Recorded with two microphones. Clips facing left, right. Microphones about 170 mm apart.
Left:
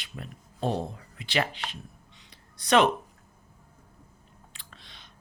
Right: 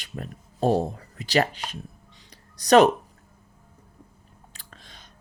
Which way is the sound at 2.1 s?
40° right (ahead or behind).